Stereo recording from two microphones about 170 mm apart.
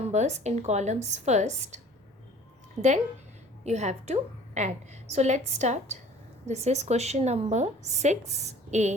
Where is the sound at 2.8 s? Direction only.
45° right (ahead or behind).